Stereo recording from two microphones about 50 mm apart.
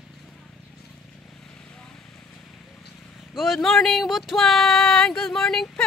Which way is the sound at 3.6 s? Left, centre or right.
Centre.